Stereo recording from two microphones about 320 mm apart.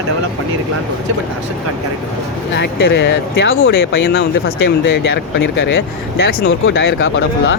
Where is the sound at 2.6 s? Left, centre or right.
Left.